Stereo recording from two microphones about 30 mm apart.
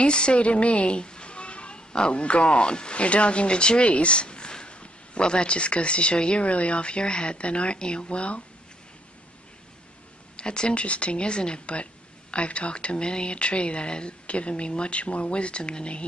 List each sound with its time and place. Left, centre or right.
0.0 s a woman's voice: left
3.9 s a sound: left
4.7 s a woman's voice: left
10.3 s speech: left
10.7 s a woman's voice: left